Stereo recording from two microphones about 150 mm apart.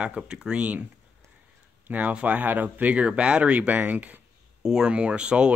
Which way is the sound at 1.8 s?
10° right (ahead or behind).